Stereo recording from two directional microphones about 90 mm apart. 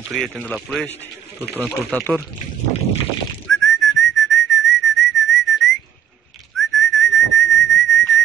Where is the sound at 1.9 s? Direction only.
15° left (ahead or behind).